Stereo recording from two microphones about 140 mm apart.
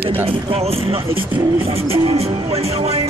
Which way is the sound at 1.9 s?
45° right (ahead or behind).